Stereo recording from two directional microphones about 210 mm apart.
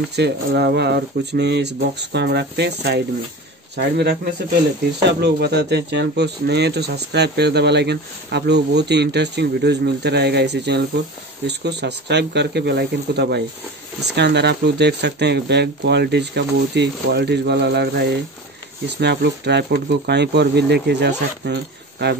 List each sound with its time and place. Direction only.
0.1 s speech: 50° right (ahead or behind)